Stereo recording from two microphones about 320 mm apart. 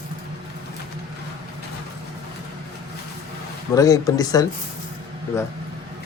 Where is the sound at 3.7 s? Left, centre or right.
Centre.